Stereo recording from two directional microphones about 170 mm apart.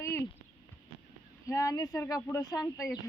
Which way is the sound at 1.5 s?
20° left (ahead or behind).